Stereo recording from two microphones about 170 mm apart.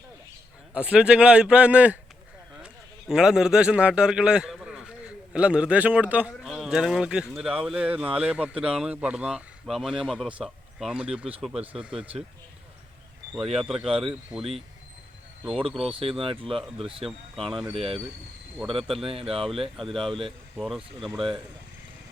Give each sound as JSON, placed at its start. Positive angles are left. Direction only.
{"t": 0.7, "sound": "a man's voice", "side_deg": -5}
{"t": 3.1, "sound": "a man's voice", "side_deg": -5}
{"t": 13.6, "sound": "speech", "side_deg": 0}
{"t": 15.8, "sound": "speech", "side_deg": -30}
{"t": 17.5, "sound": "speech", "side_deg": 0}
{"t": 17.7, "sound": "speech", "side_deg": -35}
{"t": 20.6, "sound": "speech", "side_deg": 0}
{"t": 21.1, "sound": "speech", "side_deg": -30}